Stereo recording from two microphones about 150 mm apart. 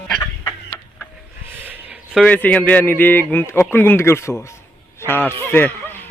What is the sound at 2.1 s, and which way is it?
Speech, 10° left (ahead or behind).